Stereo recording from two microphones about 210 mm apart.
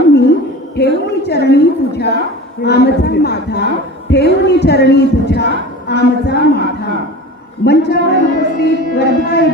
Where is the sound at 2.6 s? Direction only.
50° left (ahead or behind).